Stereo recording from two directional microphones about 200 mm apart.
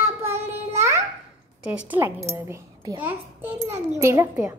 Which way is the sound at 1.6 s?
5° right (ahead or behind).